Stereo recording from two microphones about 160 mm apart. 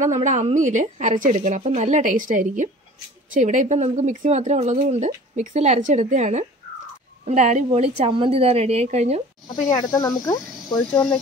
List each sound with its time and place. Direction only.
0.0 s a woman's voice: 50° right (ahead or behind)
9.8 s speech: 25° left (ahead or behind)
10.7 s speech: 5° left (ahead or behind)